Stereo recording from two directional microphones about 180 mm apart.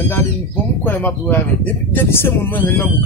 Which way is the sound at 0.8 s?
10° left (ahead or behind).